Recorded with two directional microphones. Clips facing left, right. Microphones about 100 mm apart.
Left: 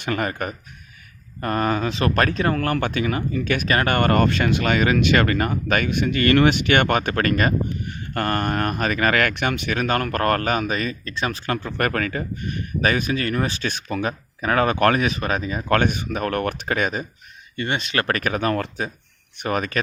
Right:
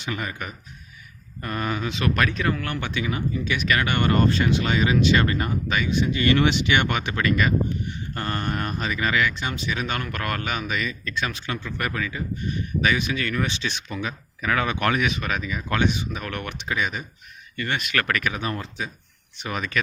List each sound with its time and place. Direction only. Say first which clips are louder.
0.0 s speech: left 6 dB; 55° left (ahead or behind); by 11.5 s 40° left (ahead or behind)
11.6 s speech: left 5 dB; 55° left (ahead or behind)
17.6 s speech: left 2 dB; 30° left (ahead or behind); by 18.4 s 45° left (ahead or behind)
18.4 s speech: left 7 dB; 65° left (ahead or behind)
19.4 s speech: left 4 dB; 45° left (ahead or behind)